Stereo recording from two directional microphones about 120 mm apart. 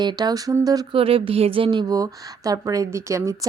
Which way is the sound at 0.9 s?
50° right (ahead or behind).